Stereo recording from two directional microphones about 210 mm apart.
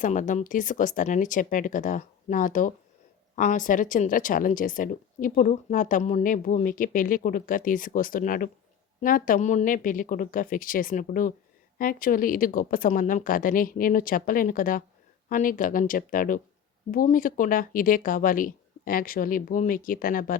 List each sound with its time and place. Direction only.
0.0 s speech: 35° left (ahead or behind)